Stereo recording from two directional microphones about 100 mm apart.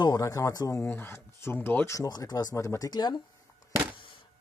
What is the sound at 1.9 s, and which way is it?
Speech, 35° left (ahead or behind).